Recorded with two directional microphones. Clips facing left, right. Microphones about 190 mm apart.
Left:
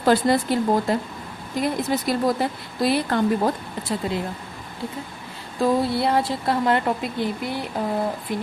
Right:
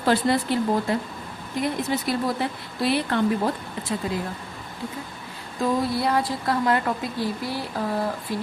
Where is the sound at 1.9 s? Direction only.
40° left (ahead or behind).